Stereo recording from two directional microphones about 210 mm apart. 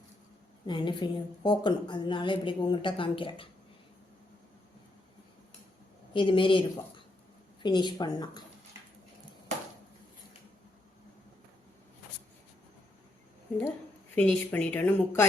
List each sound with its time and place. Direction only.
0.7 s a woman's voice: 20° left (ahead or behind)
6.1 s a woman's voice: 25° left (ahead or behind)
14.2 s speech: 10° left (ahead or behind)